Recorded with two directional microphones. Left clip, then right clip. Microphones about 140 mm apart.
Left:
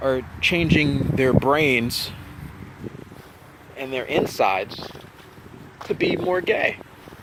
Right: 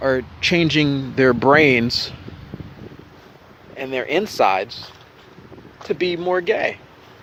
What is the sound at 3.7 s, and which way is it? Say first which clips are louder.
Speech: right 2 dB; 55° right (ahead or behind).